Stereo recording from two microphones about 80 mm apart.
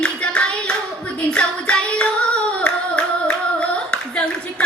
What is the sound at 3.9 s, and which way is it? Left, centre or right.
Clapping, centre.